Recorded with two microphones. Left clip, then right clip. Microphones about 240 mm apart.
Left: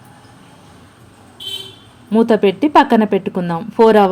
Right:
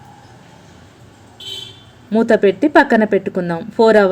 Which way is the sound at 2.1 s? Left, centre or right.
Centre.